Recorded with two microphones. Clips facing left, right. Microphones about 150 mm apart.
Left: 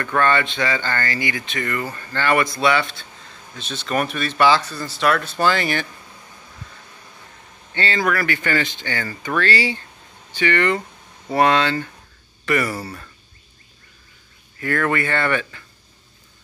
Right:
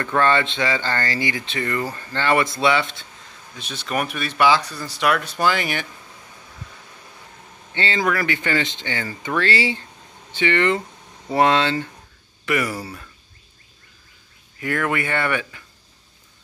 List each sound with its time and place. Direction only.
0.0 s speech: 25° right (ahead or behind)
7.7 s speech: 25° right (ahead or behind)
12.4 s speech: 10° right (ahead or behind)
14.6 s speech: 15° right (ahead or behind)